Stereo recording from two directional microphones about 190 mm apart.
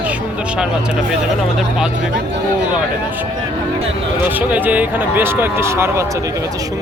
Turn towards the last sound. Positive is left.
turn(degrees=-15)  # may be behind; listen again after turning